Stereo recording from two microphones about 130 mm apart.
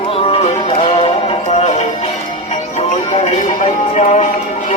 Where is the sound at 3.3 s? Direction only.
65° left (ahead or behind).